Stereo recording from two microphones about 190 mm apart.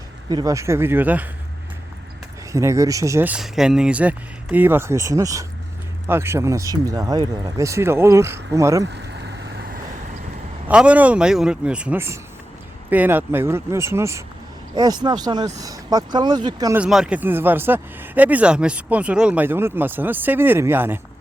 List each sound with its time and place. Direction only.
0.3 s speech: 20° right (ahead or behind)
2.5 s speech: 15° right (ahead or behind)
8.8 s vehicle: 60° right (ahead or behind)
10.7 s speech: 5° right (ahead or behind)
16.7 s speech: 5° right (ahead or behind)